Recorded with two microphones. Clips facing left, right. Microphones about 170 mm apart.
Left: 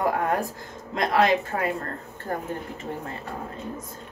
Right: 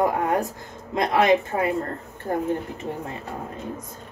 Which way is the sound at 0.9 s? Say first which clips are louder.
Right 2 dB; 20° right (ahead or behind).